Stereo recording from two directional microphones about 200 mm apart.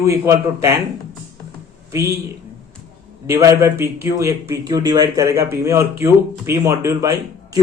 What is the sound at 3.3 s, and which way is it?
Speech, 15° right (ahead or behind).